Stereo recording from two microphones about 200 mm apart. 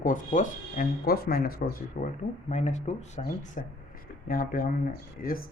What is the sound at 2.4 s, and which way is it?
Speech, 35° left (ahead or behind).